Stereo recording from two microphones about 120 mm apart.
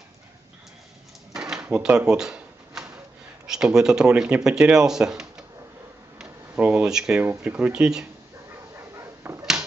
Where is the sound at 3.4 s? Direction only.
5° right (ahead or behind).